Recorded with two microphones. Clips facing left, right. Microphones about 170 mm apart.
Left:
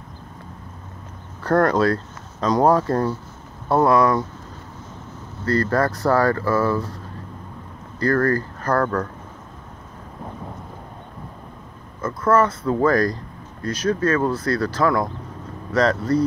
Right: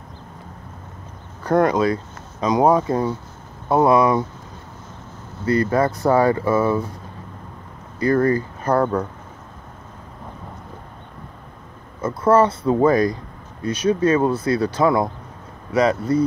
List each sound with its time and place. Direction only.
1.4 s speech: 15° right (ahead or behind)
2.8 s speech: centre (ahead or behind)
3.6 s speech: 20° right (ahead or behind)
5.4 s speech: 15° right (ahead or behind)
8.0 s speech: 20° right (ahead or behind)
12.1 s speech: 30° right (ahead or behind)
13.1 s speech: 10° right (ahead or behind)
15.7 s speech: 5° right (ahead or behind)